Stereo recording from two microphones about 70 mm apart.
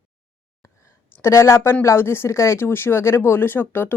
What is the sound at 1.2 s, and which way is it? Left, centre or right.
A woman's voice, left.